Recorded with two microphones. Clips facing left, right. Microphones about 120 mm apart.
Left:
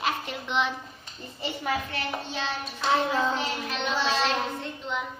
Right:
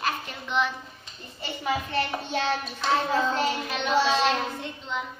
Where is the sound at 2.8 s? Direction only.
5° left (ahead or behind).